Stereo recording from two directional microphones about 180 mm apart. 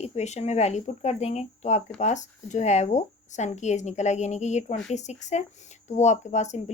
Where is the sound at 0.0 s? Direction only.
35° left (ahead or behind).